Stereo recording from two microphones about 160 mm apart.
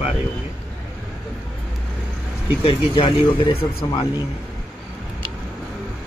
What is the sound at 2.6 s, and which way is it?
Speech, 35° left (ahead or behind).